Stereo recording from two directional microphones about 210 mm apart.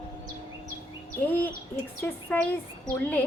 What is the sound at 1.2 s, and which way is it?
A woman's voice, 10° left (ahead or behind).